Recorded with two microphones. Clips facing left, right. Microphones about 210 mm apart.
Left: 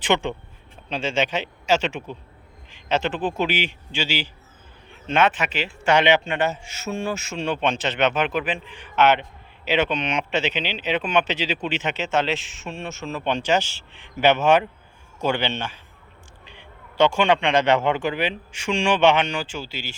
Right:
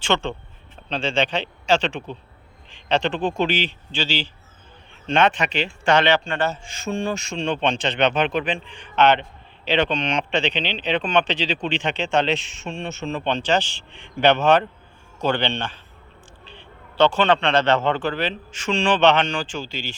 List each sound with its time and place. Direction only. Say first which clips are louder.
0.0 s a man's voice: left 1 dB; 15° left (ahead or behind)